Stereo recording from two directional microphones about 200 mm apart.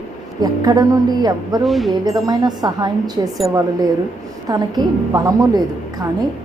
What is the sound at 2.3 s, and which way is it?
Speech, 20° right (ahead or behind).